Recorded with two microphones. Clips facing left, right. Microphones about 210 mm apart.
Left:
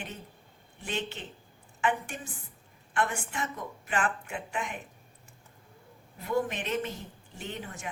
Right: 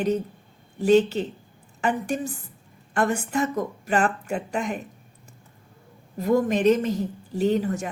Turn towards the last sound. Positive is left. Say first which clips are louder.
# right 16 dB
turn(degrees=-40)  # may be behind; listen again after turning